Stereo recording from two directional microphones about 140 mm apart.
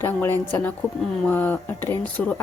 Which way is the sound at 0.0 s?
15° left (ahead or behind).